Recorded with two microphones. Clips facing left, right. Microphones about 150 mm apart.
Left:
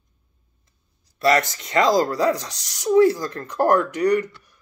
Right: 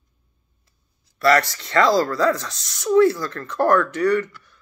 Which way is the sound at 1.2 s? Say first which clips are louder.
Right 1 dB; 15° left (ahead or behind).